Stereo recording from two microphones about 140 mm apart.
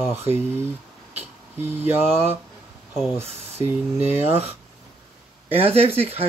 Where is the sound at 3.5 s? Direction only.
15° right (ahead or behind).